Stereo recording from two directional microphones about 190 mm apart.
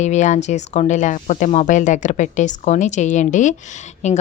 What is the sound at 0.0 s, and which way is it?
Speech, 40° left (ahead or behind).